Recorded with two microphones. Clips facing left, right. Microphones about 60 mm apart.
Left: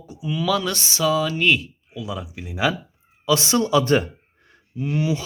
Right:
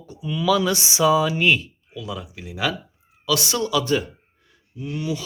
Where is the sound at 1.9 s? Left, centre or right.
Centre; by 4.0 s left.